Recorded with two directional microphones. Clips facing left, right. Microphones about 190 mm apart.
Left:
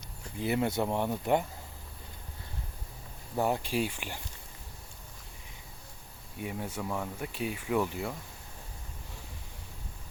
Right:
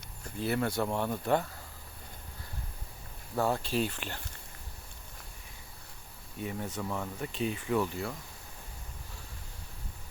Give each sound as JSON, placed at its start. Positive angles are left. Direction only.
{"t": 0.3, "sound": "speech", "side_deg": 15}
{"t": 3.3, "sound": "speech", "side_deg": 15}
{"t": 6.4, "sound": "speech", "side_deg": 10}